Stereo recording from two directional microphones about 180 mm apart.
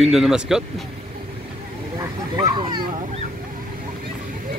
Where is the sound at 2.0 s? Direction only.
25° right (ahead or behind).